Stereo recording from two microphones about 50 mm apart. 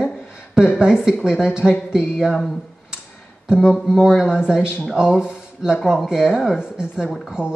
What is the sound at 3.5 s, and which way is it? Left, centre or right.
Speech, centre.